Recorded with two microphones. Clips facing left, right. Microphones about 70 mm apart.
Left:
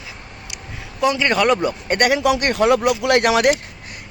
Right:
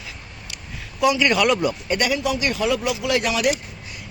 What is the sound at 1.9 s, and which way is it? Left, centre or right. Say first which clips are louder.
Speech: left 7 dB; left.